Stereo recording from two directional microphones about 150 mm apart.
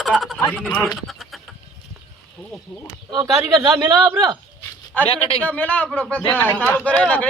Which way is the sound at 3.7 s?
25° right (ahead or behind).